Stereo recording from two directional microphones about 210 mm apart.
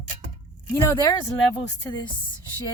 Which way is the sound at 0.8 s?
15° left (ahead or behind).